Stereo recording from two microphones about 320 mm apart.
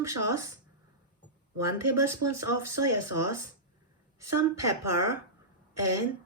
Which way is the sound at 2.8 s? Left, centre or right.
Right.